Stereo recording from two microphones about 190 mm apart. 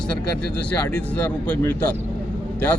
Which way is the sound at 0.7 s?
10° left (ahead or behind).